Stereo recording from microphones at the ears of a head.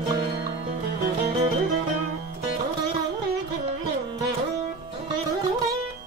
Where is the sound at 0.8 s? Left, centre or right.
Right.